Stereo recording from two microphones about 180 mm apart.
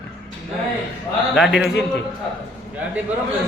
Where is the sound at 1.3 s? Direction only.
Centre (ahead or behind).